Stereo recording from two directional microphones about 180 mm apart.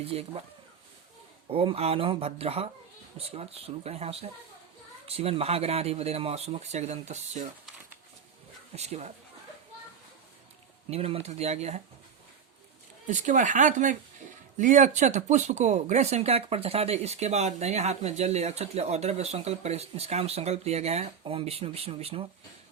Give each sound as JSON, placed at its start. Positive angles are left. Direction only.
{"t": 0.0, "sound": "speech", "side_deg": -35}
{"t": 1.5, "sound": "speech", "side_deg": -35}
{"t": 8.7, "sound": "speech", "side_deg": -35}
{"t": 10.8, "sound": "speech", "side_deg": -35}
{"t": 13.1, "sound": "speech", "side_deg": -45}